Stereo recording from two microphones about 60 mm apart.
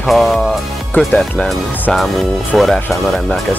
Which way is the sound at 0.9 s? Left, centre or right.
Left.